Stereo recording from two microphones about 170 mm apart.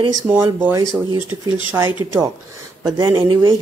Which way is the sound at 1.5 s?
30° left (ahead or behind).